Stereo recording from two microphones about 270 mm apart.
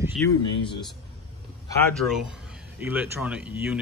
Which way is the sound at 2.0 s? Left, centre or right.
Centre.